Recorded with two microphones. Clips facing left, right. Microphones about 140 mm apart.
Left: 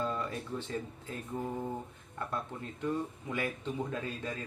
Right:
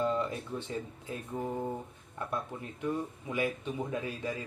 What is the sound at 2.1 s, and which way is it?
Speech, 15° right (ahead or behind).